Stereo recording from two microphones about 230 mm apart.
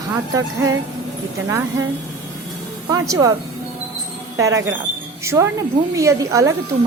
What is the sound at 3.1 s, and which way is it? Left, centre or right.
Speech, centre.